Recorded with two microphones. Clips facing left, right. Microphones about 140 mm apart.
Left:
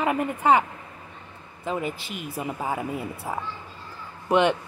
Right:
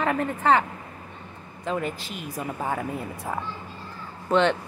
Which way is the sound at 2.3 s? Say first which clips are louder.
Even; 10° left (ahead or behind).